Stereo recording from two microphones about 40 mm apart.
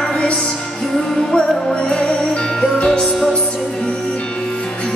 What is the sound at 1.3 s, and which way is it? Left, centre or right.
Music, left.